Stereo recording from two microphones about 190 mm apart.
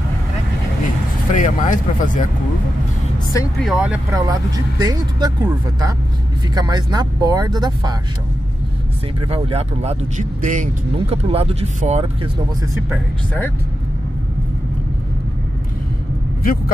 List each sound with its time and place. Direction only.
1.3 s speech: 40° left (ahead or behind)
3.5 s speech: 5° right (ahead or behind)
4.1 s speech: 20° right (ahead or behind)
9.3 s speech: 30° right (ahead or behind)